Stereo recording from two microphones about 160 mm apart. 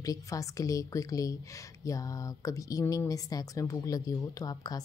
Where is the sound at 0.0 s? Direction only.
20° left (ahead or behind).